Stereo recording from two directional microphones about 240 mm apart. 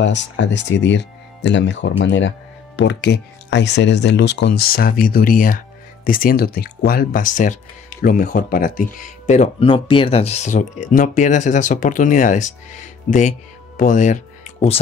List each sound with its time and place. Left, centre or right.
0.0 s speech: left